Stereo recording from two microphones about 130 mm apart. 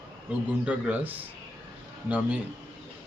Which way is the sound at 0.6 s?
10° right (ahead or behind).